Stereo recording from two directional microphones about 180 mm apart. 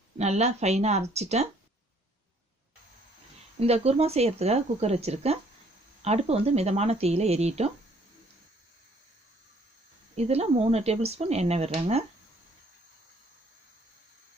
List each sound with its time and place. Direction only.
0.2 s speech: 40° right (ahead or behind)
3.6 s speech: 35° right (ahead or behind)
10.2 s speech: 35° right (ahead or behind)